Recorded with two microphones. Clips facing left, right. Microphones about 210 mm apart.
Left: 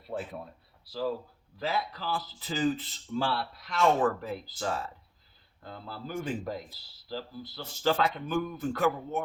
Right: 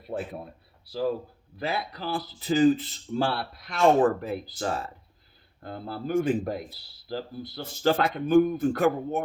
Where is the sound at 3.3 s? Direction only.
55° right (ahead or behind).